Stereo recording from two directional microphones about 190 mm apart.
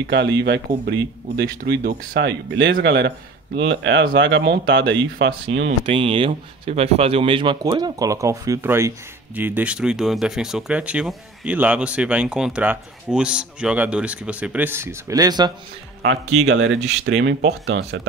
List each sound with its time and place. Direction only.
0.0 s speech: 65° right (ahead or behind)
3.5 s speech: 75° right (ahead or behind)
5.9 s speech: 30° right (ahead or behind)
16.0 s speech: 90° right
17.0 s speech: 75° right (ahead or behind)